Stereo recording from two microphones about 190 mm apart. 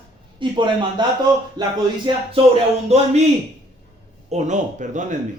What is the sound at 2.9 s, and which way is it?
Speech, 35° right (ahead or behind).